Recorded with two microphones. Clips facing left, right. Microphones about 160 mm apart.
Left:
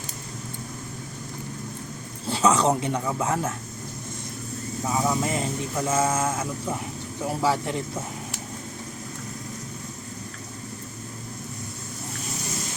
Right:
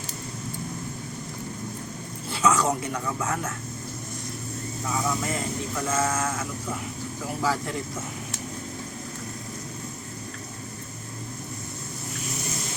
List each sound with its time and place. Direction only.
2.3 s speech: 30° left (ahead or behind)
4.9 s speech: 25° left (ahead or behind)